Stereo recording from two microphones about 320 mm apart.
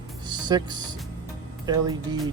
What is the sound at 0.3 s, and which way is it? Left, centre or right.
Music, centre.